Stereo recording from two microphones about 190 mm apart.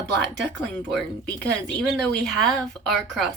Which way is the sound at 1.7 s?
5° left (ahead or behind).